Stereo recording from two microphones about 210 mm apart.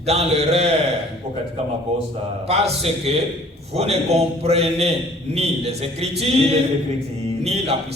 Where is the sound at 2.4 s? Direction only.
30° right (ahead or behind).